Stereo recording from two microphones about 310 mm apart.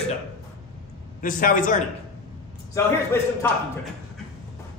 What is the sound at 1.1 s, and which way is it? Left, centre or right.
Speech, left.